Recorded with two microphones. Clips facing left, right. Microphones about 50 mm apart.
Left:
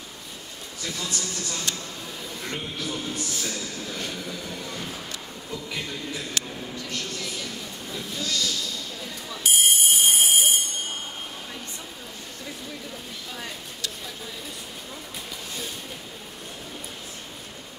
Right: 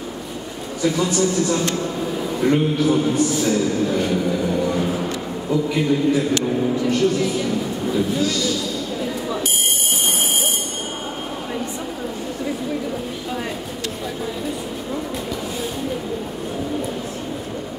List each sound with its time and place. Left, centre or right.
0.8 s a woman's voice: centre
1.5 s a man's voice: right
3.2 s speech: centre; by 5.1 s right
5.5 s a woman's voice: centre
10.0 s fire alarm: centre